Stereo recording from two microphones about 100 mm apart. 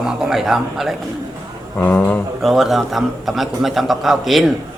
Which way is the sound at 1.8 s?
20° left (ahead or behind).